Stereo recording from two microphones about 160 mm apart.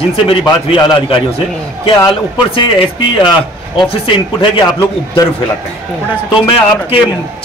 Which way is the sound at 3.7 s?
35° left (ahead or behind).